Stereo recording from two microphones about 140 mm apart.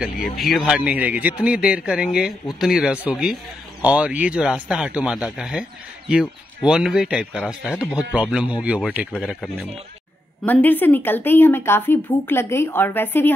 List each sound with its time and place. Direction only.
0.1 s a man's voice: 90° left
0.5 s a man's voice: 5° right (ahead or behind)
10.4 s speech: 10° left (ahead or behind)